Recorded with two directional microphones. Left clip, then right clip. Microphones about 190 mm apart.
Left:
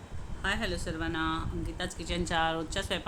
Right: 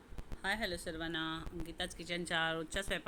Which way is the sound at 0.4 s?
10° right (ahead or behind).